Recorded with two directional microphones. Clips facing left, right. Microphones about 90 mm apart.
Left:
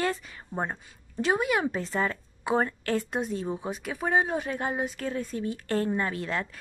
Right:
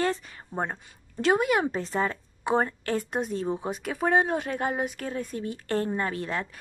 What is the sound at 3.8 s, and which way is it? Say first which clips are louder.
Speech: right 3 dB; 50° right (ahead or behind).